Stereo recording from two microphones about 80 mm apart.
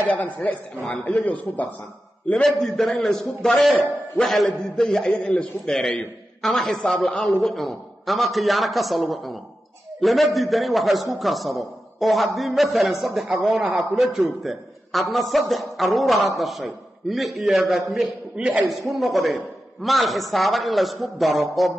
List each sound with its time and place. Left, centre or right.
0.0 s a man's voice: centre
2.4 s a man's voice: centre
13.5 s a man's voice: centre
13.7 s a man's voice: centre
18.3 s a man's voice: centre
18.6 s a man's voice: centre